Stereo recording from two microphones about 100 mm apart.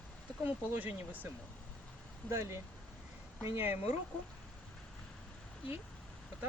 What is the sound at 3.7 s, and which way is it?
Speech, 90° left.